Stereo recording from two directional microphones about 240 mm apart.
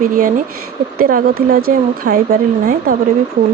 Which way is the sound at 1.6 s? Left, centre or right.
Right.